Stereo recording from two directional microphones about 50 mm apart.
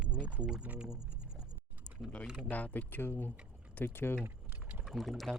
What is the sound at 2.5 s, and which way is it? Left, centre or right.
Speech, left.